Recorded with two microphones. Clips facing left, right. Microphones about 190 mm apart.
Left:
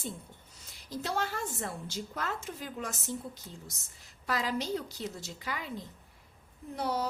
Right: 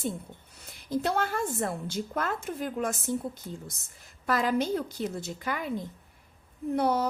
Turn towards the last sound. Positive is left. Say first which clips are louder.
# right 7 dB
turn(degrees=-55)  # may be behind; listen again after turning